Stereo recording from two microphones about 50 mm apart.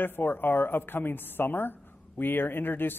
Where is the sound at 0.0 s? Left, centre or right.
Left.